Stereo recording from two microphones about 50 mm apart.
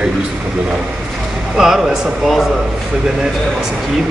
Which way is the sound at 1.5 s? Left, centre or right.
Centre.